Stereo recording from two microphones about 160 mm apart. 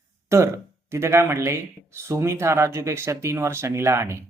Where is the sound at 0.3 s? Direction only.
20° right (ahead or behind).